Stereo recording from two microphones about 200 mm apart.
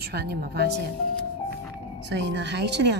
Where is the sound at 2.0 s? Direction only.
60° right (ahead or behind).